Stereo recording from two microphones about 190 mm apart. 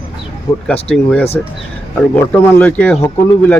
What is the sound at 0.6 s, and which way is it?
Speech, 5° left (ahead or behind).